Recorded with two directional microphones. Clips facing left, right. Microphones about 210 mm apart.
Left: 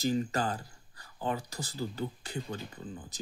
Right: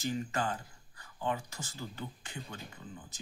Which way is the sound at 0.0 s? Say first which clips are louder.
Left 4 dB; 35° left (ahead or behind).